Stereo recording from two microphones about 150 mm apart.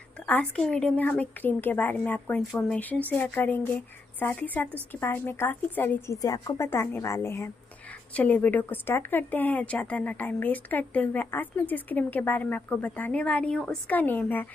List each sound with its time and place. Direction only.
0.3 s speech: 5° left (ahead or behind)